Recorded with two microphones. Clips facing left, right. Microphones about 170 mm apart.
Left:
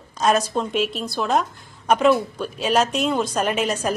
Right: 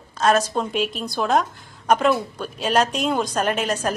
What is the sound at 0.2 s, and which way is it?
A woman's voice, 10° left (ahead or behind).